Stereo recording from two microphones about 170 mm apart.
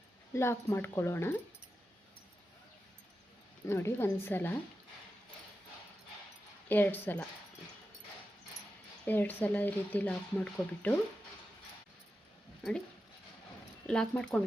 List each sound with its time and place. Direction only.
0.3 s speech: 15° left (ahead or behind)
3.7 s speech: 15° left (ahead or behind)
6.7 s speech: 10° left (ahead or behind)
9.0 s speech: 10° left (ahead or behind)
13.8 s speech: 5° left (ahead or behind)